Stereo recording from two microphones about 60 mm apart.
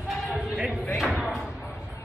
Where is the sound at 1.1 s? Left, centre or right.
Centre.